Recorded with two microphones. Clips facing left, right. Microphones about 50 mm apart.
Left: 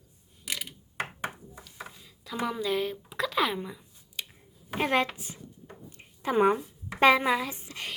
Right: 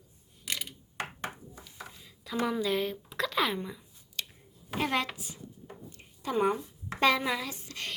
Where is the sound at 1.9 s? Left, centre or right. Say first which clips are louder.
Even; centre.